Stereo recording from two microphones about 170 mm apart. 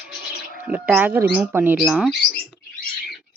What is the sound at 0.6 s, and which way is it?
A woman's voice, 10° right (ahead or behind).